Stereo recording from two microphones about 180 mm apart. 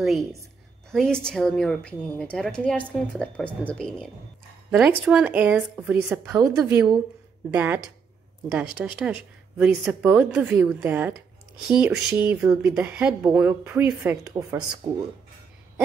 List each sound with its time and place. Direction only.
0.0 s a woman's voice: centre (ahead or behind)
4.6 s a woman's voice: 5° right (ahead or behind)
6.7 s a woman's voice: 15° right (ahead or behind)
8.8 s a woman's voice: 5° right (ahead or behind)